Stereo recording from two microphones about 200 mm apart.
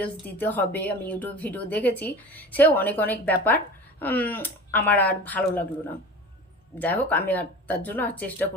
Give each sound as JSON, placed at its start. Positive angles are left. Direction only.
{"t": 0.0, "sound": "a woman's voice", "side_deg": 10}
{"t": 6.7, "sound": "a woman's voice", "side_deg": 10}